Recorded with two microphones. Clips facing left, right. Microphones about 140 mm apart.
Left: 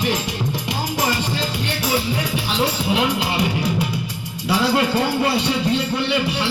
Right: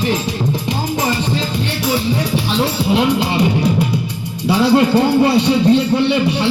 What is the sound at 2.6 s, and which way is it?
Speech, 30° right (ahead or behind).